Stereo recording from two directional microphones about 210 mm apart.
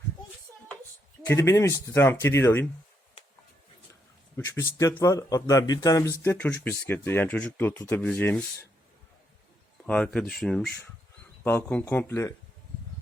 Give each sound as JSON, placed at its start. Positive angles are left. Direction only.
{"t": 1.3, "sound": "speech", "side_deg": 15}
{"t": 4.4, "sound": "speech", "side_deg": 15}
{"t": 9.8, "sound": "speech", "side_deg": 5}